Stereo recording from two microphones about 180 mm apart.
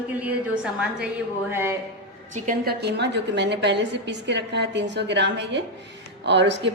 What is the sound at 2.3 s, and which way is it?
A woman's voice, 45° right (ahead or behind).